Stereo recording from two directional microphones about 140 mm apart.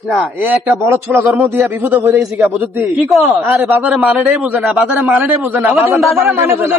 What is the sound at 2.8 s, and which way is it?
A man's voice, centre (ahead or behind).